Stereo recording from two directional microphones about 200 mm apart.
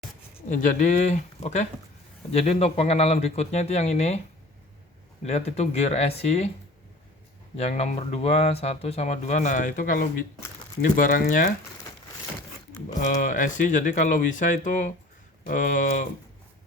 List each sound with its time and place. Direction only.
0.4 s speech: 40° left (ahead or behind)
5.2 s speech: 35° left (ahead or behind)
7.5 s speech: 30° left (ahead or behind)
13.0 s speech: 40° left (ahead or behind)